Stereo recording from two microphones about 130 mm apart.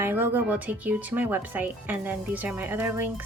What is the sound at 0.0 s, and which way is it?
Speech, 15° right (ahead or behind).